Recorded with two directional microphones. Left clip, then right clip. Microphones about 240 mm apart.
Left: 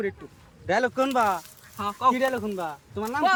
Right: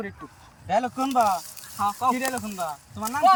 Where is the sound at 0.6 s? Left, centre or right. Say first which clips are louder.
Left 1 dB; centre.